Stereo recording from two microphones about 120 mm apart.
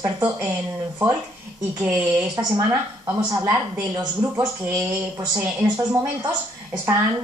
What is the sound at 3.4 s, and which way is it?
Speech, 15° right (ahead or behind).